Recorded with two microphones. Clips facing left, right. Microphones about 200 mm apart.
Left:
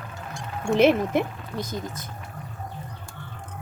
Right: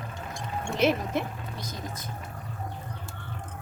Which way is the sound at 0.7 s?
55° left (ahead or behind).